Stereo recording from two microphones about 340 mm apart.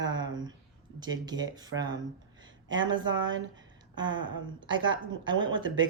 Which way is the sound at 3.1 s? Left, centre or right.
Right.